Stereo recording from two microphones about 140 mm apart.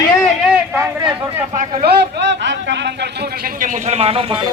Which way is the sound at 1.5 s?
65° right (ahead or behind).